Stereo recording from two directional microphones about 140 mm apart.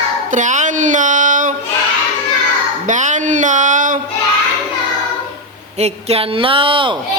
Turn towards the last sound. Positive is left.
turn(degrees=-35)  # may be behind; listen again after turning